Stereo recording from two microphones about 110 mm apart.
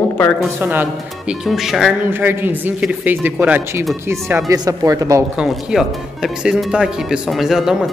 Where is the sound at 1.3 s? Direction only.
5° right (ahead or behind).